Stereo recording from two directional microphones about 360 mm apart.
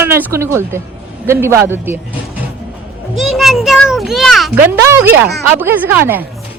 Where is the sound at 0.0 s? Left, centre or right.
Centre.